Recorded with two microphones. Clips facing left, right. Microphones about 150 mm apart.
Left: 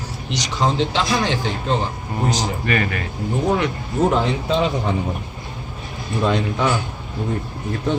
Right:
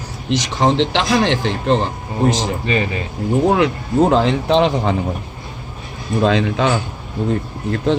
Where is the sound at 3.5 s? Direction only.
85° right.